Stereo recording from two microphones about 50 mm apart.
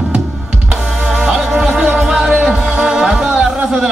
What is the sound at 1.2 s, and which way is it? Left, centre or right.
Music, centre.